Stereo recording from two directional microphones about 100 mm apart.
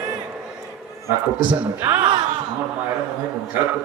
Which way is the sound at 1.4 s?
15° right (ahead or behind).